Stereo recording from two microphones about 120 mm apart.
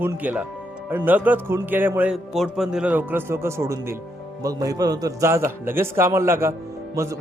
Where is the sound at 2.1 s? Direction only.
Centre (ahead or behind); by 7.2 s 25° right (ahead or behind).